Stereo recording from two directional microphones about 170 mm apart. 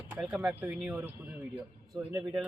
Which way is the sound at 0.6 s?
10° right (ahead or behind).